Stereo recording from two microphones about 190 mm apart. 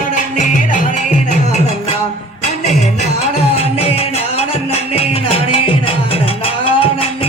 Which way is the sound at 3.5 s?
30° left (ahead or behind).